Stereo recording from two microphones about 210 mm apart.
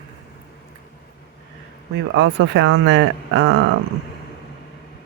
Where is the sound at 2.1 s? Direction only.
60° right (ahead or behind).